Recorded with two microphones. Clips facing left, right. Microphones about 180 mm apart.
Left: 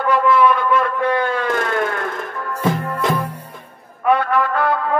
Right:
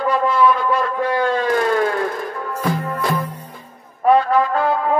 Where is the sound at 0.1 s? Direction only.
60° left (ahead or behind).